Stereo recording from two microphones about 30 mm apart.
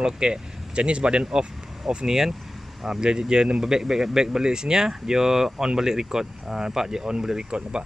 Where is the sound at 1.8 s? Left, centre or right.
Centre.